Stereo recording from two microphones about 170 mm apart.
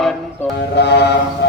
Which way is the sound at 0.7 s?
80° left.